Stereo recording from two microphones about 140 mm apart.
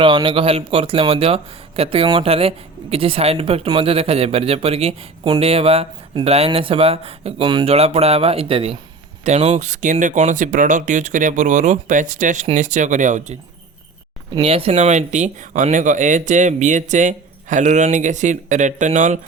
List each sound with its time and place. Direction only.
0.0 s a man's voice: 35° right (ahead or behind)
7.4 s speech: 30° right (ahead or behind)
7.7 s a man's voice: 45° right (ahead or behind)
9.2 s speech: 55° right (ahead or behind)
14.4 s speech: 45° right (ahead or behind); by 19.2 s 60° right (ahead or behind)